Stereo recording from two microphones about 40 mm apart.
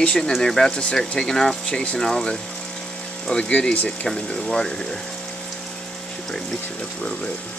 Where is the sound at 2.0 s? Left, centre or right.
Centre.